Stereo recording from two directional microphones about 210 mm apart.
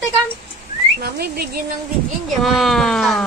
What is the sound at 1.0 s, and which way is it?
Whistling, 50° right (ahead or behind).